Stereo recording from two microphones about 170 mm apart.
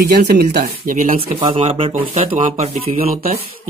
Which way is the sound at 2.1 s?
45° right (ahead or behind).